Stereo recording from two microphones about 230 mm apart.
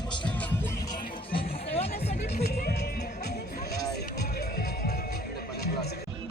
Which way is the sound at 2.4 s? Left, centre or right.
Left.